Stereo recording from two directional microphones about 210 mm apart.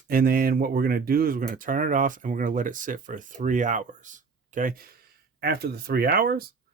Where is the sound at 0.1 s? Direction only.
45° right (ahead or behind).